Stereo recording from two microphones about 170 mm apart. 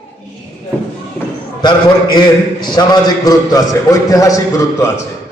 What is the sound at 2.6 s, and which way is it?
A man's voice, 25° left (ahead or behind).